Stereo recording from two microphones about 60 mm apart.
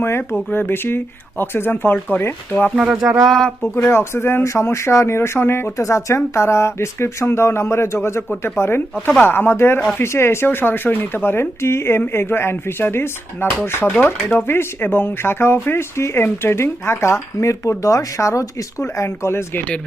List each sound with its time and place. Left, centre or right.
0.0 s speech: left
2.7 s music: centre
3.2 s speech: centre
3.8 s speech: left
5.7 s speech: left
14.0 s speech: left
14.4 s speech: left